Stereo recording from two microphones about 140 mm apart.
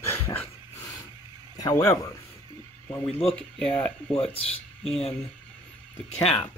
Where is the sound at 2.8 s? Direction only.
10° left (ahead or behind).